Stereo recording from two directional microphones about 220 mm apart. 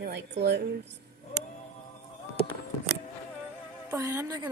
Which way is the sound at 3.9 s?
15° right (ahead or behind).